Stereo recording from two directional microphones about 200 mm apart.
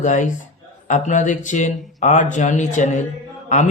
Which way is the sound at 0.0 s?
40° left (ahead or behind).